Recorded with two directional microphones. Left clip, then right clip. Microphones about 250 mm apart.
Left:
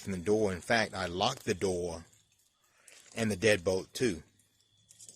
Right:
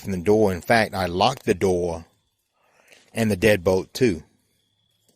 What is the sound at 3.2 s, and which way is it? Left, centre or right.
Speech, right.